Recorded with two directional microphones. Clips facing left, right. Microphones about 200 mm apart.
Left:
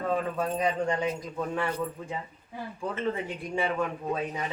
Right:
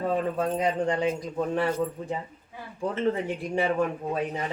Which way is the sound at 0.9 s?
30° right (ahead or behind).